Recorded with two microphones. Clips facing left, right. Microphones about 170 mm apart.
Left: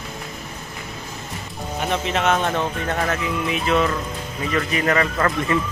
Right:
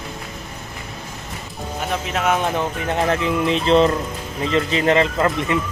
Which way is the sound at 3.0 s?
30° right (ahead or behind).